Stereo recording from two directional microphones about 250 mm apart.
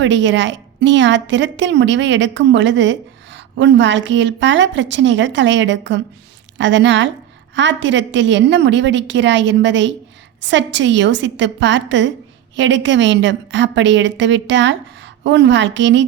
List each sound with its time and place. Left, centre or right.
0.0 s a woman's voice: right